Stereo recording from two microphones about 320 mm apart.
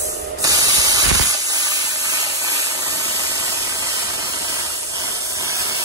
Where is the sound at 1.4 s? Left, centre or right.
Centre.